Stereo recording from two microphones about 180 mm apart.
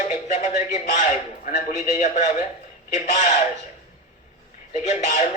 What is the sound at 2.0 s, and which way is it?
A man's voice, 40° left (ahead or behind).